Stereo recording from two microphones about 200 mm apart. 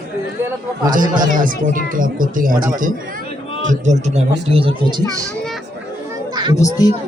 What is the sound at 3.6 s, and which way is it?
Speech, 40° right (ahead or behind).